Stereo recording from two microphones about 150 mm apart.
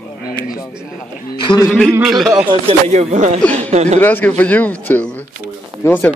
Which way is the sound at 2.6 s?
45° right (ahead or behind).